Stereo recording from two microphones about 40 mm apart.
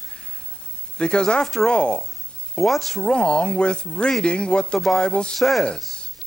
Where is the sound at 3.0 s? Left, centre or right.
Left.